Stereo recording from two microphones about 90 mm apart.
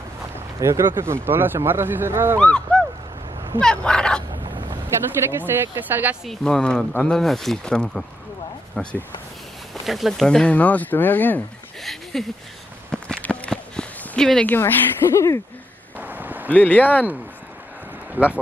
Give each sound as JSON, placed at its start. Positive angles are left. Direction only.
{"t": 0.6, "sound": "speech", "side_deg": -35}
{"t": 2.3, "sound": "speech", "side_deg": 10}
{"t": 3.6, "sound": "speech", "side_deg": 10}
{"t": 5.4, "sound": "speech", "side_deg": -20}
{"t": 6.2, "sound": "speech", "side_deg": 5}
{"t": 9.8, "sound": "speech", "side_deg": 0}
{"t": 11.8, "sound": "speech", "side_deg": 0}
{"t": 12.9, "sound": "a sound", "side_deg": 10}
{"t": 14.5, "sound": "a woman's voice", "side_deg": 25}
{"t": 16.0, "sound": "a sound", "side_deg": -20}
{"t": 16.4, "sound": "speech", "side_deg": 20}
{"t": 18.2, "sound": "speech", "side_deg": -20}